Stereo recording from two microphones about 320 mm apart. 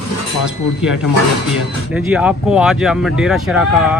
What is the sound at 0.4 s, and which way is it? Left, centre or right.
Speech, centre.